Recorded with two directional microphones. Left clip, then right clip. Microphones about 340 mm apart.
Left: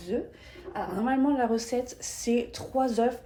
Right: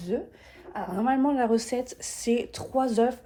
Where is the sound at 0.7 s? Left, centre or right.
Centre.